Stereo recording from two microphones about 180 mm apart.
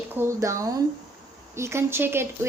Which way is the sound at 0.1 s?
15° right (ahead or behind).